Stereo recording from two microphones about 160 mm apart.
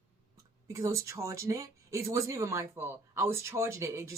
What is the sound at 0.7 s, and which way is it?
Speech, 20° right (ahead or behind).